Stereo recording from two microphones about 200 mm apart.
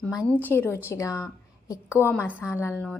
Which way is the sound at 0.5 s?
10° left (ahead or behind).